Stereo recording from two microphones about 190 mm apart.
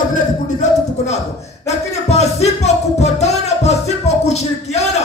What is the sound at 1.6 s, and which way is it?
Music, 35° left (ahead or behind).